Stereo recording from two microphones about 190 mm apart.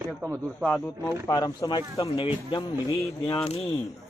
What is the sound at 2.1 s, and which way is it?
Speech, 30° left (ahead or behind).